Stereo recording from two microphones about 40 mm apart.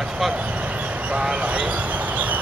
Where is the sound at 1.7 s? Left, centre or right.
Right.